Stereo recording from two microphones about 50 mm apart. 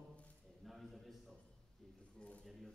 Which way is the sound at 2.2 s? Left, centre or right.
Left.